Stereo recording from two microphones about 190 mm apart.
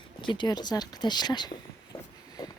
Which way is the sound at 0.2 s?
25° left (ahead or behind).